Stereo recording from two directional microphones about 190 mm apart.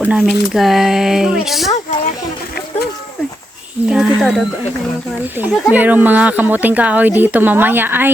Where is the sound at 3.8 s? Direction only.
5° right (ahead or behind).